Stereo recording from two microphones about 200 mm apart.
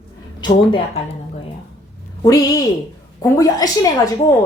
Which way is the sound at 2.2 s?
15° left (ahead or behind).